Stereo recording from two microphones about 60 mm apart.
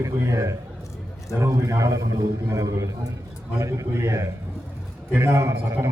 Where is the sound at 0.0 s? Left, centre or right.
Right.